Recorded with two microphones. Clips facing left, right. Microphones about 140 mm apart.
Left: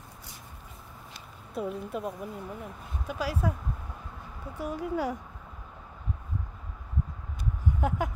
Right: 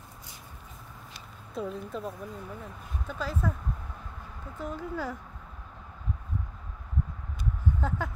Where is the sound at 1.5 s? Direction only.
5° left (ahead or behind).